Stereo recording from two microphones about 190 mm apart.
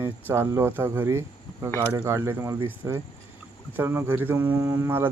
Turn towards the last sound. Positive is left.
turn(degrees=-10)  # may be behind; listen again after turning